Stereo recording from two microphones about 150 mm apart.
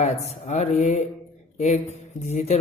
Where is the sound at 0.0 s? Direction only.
45° left (ahead or behind).